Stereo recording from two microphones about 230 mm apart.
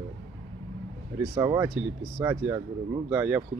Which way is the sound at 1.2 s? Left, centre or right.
Centre.